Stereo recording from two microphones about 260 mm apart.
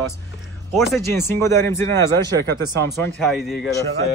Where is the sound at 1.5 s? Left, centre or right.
Right.